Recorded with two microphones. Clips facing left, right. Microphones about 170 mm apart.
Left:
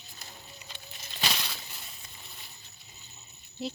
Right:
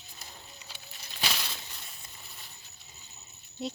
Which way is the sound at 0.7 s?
5° right (ahead or behind).